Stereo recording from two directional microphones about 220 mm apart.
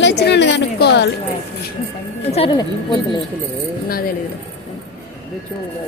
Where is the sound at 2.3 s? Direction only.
25° left (ahead or behind).